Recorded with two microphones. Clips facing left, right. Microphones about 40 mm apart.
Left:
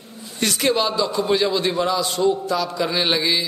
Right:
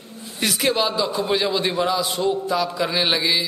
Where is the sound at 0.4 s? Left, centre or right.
Centre.